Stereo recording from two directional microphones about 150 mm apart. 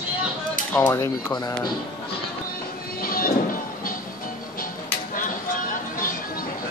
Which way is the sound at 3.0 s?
75° left (ahead or behind).